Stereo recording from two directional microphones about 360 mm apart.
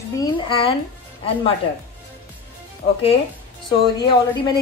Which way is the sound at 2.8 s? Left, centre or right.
Left.